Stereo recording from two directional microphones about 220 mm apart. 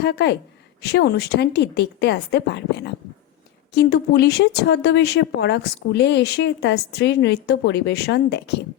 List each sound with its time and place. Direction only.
0.0 s speech: 50° left (ahead or behind)